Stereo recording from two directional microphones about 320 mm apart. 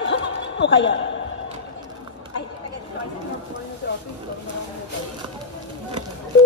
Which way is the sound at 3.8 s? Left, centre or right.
Left.